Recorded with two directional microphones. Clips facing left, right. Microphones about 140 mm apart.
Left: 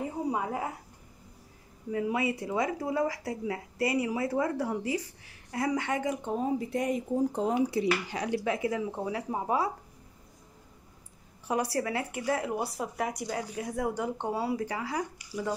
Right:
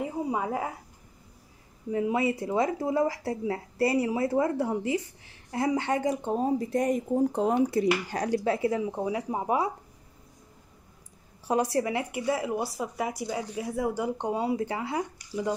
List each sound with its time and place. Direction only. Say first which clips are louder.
0.3 s speech: right 2 dB; 15° right (ahead or behind)
1.9 s speech: right 3 dB; 25° right (ahead or behind); by 7.0 s 45° right (ahead or behind)
7.3 s speech: right 3 dB; 65° right (ahead or behind); by 8.4 s 45° right (ahead or behind)
8.5 s speech: right 4 dB; 30° right (ahead or behind)
8.9 s speech: right 3 dB; 15° right (ahead or behind)
11.4 s speech: right 4 dB; 25° right (ahead or behind)